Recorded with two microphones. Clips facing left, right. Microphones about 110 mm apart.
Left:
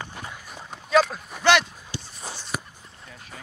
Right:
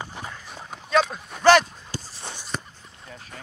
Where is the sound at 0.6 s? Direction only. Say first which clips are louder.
Left 2 dB; centre (ahead or behind).